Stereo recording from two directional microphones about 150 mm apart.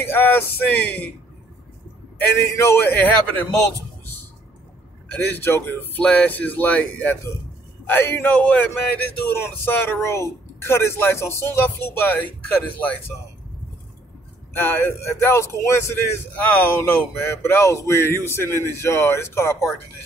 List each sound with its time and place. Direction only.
0.0 s speech: 15° left (ahead or behind)
2.1 s speech: 15° left (ahead or behind)
5.1 s speech: 15° left (ahead or behind)
14.5 s speech: 15° left (ahead or behind)